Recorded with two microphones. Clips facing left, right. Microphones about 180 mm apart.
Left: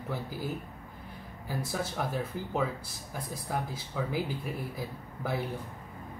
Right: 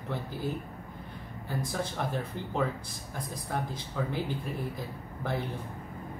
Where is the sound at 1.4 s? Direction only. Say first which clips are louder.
Even; 5° left (ahead or behind).